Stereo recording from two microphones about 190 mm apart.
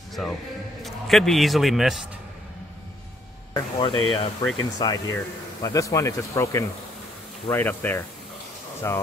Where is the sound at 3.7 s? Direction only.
25° left (ahead or behind).